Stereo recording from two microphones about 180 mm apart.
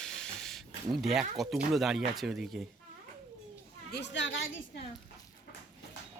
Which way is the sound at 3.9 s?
75° left (ahead or behind).